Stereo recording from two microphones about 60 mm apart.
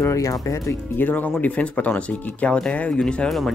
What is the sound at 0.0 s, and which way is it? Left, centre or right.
Speech, left.